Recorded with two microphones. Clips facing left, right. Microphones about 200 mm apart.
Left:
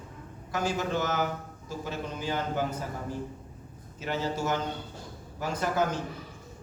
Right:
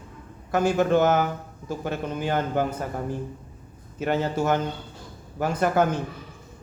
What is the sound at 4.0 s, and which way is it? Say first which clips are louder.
A man's voice: right 6 dB; 55° right (ahead or behind).